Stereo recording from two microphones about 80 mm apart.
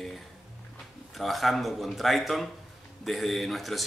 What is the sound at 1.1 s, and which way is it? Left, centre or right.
A man's voice, centre.